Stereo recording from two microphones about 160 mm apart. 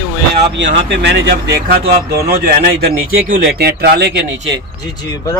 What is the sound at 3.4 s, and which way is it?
Speech, 75° right (ahead or behind).